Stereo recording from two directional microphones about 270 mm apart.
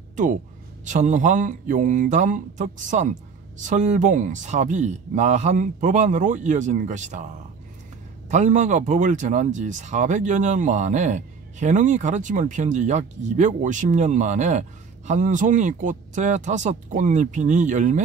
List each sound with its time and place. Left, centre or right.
0.1 s a sound: right
0.8 s speech: right
8.3 s speech: right